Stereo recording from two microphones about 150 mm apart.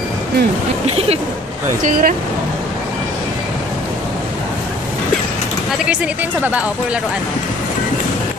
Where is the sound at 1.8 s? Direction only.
65° right (ahead or behind).